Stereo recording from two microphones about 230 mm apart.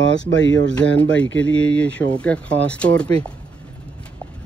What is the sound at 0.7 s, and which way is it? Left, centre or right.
Speech, centre.